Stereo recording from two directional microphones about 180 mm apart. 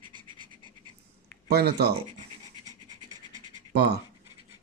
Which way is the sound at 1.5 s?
65° right (ahead or behind).